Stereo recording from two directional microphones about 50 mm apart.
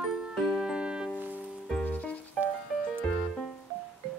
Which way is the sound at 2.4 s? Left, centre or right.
Centre.